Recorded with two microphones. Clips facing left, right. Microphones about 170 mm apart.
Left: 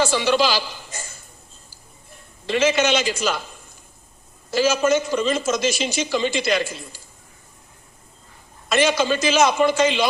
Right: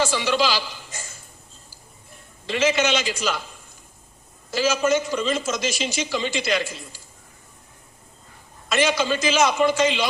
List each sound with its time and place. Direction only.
0.0 s a man's voice: 45° left (ahead or behind)
2.5 s a man's voice: 45° left (ahead or behind)
4.5 s a man's voice: 45° left (ahead or behind)
8.7 s a man's voice: 45° left (ahead or behind)